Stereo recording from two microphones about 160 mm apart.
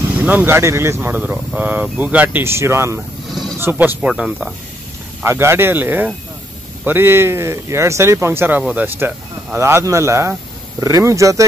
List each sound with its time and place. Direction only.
0.1 s speech: 10° right (ahead or behind)
5.2 s speech: 15° right (ahead or behind)